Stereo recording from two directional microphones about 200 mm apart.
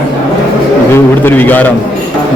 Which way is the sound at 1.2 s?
10° left (ahead or behind).